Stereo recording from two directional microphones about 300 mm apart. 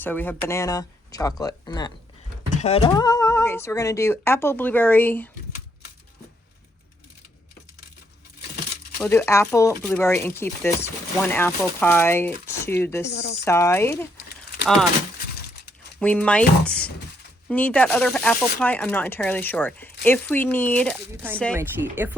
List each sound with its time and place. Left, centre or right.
0.0 s speech: centre
9.0 s speech: centre
13.1 s speech: left
13.4 s speech: centre
16.0 s speech: centre
21.5 s speech: centre